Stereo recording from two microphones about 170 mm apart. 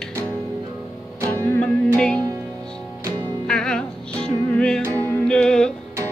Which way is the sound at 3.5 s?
5° left (ahead or behind).